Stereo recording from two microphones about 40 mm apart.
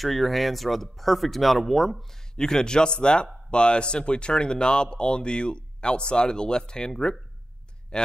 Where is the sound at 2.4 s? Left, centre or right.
Centre.